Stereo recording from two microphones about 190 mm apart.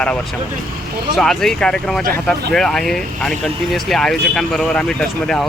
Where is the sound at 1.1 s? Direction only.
Centre (ahead or behind).